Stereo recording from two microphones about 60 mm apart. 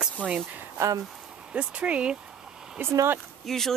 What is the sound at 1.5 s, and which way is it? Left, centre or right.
Speech, centre.